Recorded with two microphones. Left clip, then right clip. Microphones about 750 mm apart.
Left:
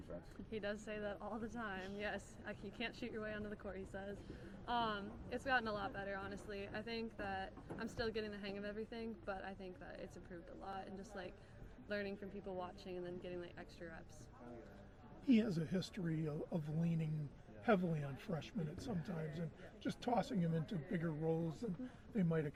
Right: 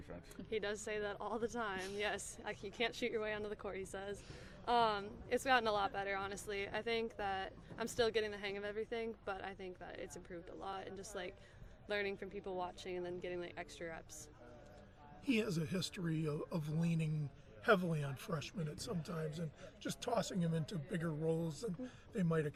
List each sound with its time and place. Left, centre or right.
0.5 s speech: right
15.3 s speech: right